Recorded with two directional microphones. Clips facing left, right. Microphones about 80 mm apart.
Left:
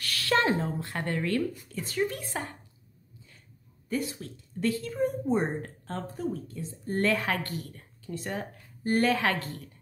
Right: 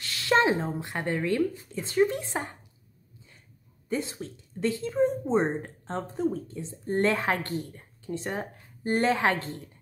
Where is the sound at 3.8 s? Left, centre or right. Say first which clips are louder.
Right 1 dB; right.